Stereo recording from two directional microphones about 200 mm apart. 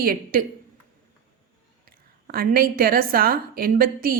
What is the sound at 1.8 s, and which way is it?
A woman's voice, 50° right (ahead or behind).